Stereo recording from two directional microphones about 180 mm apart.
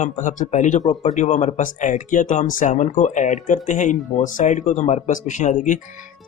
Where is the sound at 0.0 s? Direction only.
45° left (ahead or behind).